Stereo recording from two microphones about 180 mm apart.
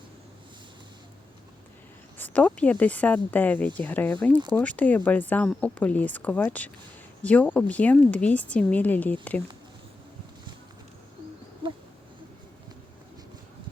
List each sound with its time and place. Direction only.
2.1 s speech: 10° left (ahead or behind)